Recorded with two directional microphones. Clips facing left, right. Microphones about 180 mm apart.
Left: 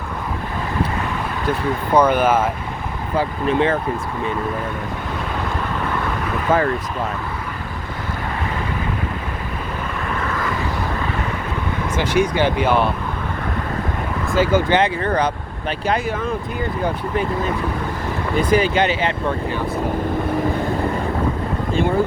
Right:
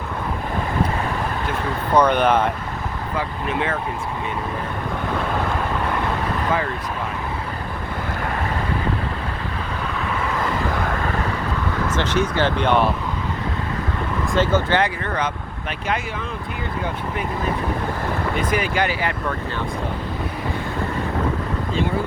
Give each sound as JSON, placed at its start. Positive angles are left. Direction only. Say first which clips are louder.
{"t": 2.0, "sound": "speech", "louder": "left 1 dB", "side_deg": 5}
{"t": 3.2, "sound": "speech", "louder": "left 7 dB", "side_deg": 30}
{"t": 6.5, "sound": "speech", "louder": "left 7 dB", "side_deg": 45}
{"t": 11.9, "sound": "speech", "louder": "left 4 dB", "side_deg": 10}
{"t": 14.3, "sound": "speech", "louder": "left 3 dB", "side_deg": 10}
{"t": 15.0, "sound": "speech", "louder": "left 5 dB", "side_deg": 35}
{"t": 18.3, "sound": "speech", "louder": "left 7 dB", "side_deg": 30}